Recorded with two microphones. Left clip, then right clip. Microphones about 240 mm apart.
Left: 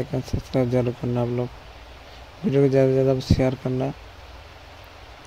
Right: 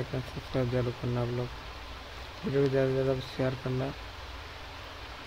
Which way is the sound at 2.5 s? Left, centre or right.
Left.